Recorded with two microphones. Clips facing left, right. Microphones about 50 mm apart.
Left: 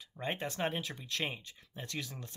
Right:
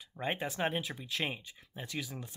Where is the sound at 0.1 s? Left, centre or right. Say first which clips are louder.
Right 2 dB; centre.